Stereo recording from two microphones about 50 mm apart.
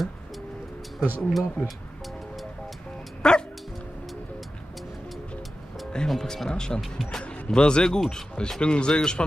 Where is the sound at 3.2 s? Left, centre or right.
Centre.